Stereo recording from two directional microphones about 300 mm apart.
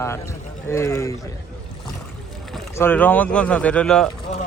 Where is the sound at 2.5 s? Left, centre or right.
Centre.